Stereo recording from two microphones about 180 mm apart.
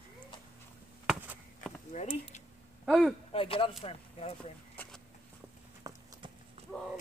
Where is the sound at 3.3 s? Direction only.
30° left (ahead or behind).